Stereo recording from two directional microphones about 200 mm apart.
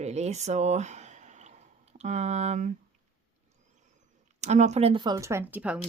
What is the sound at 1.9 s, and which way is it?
Speech, 35° right (ahead or behind).